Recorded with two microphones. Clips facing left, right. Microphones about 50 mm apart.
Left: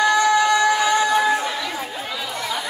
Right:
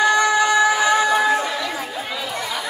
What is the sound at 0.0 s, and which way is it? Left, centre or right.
Music, centre.